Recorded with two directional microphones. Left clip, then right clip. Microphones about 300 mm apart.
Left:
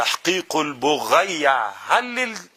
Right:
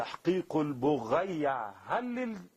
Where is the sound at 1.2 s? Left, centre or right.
Centre.